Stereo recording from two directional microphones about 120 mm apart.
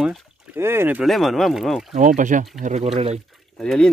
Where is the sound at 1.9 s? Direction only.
90° right.